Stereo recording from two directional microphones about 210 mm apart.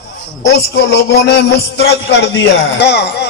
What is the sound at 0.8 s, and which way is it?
Speech, 55° left (ahead or behind).